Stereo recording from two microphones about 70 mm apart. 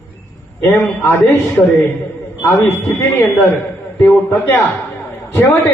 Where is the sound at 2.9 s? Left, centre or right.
Left.